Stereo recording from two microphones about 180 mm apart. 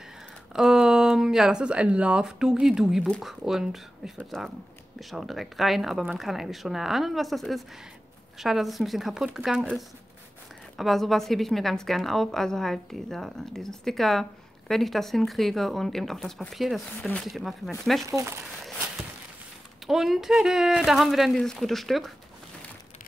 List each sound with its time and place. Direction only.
0.5 s speech: 5° right (ahead or behind)
18.0 s speech: 15° right (ahead or behind)
19.9 s speech: centre (ahead or behind)